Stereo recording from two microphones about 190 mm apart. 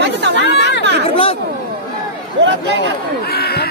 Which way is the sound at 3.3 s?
55° left (ahead or behind).